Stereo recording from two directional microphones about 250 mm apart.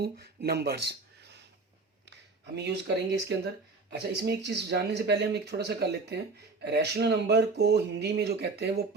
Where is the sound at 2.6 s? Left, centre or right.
Right.